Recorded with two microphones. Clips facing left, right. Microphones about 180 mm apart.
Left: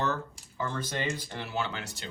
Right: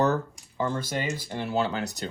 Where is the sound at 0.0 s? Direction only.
35° right (ahead or behind).